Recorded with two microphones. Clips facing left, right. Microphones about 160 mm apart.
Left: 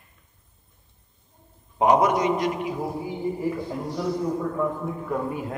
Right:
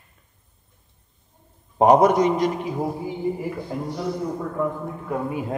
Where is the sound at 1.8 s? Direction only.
40° right (ahead or behind).